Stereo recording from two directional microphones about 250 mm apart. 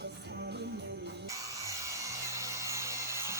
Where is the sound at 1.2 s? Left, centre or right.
Centre.